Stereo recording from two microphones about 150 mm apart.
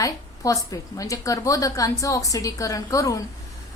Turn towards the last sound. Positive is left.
turn(degrees=20)  # may be behind; listen again after turning